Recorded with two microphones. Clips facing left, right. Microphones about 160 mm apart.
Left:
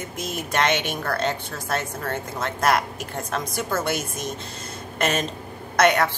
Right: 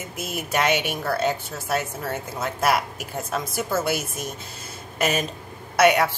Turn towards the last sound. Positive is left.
turn(degrees=-10)  # may be behind; listen again after turning